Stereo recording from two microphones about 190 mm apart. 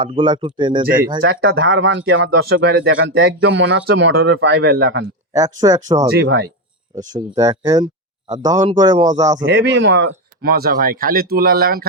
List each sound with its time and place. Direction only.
0.0 s speech: 25° right (ahead or behind)
1.3 s speech: 55° right (ahead or behind)
1.6 s speech: 80° right
3.4 s speech: 75° right (ahead or behind)
5.3 s speech: 20° right (ahead or behind)
7.1 s speech: 20° right (ahead or behind)
9.4 s speech: 70° right (ahead or behind)
10.4 s speech: 50° right (ahead or behind)